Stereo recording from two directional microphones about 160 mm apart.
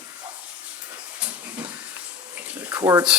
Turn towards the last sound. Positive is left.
turn(degrees=-20)  # may be behind; listen again after turning